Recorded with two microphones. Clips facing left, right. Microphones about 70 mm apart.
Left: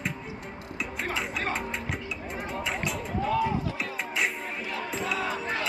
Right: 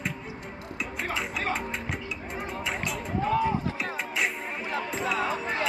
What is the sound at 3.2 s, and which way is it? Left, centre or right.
Music, right.